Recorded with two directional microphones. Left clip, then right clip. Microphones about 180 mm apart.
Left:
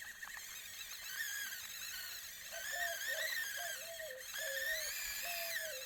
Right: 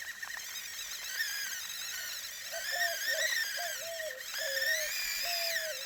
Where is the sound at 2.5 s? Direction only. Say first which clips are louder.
Right 7 dB; 20° right (ahead or behind).